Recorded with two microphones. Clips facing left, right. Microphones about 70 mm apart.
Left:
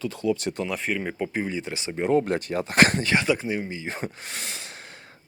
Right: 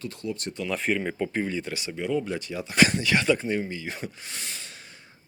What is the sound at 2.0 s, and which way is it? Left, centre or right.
Speech, left.